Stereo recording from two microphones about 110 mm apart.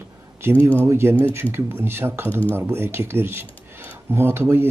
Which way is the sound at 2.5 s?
20° right (ahead or behind).